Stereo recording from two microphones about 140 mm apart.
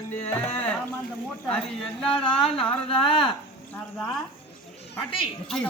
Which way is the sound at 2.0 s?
40° left (ahead or behind).